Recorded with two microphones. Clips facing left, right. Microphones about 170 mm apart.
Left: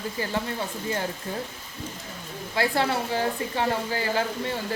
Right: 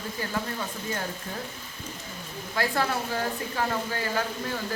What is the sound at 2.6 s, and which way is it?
A woman's voice, 25° left (ahead or behind).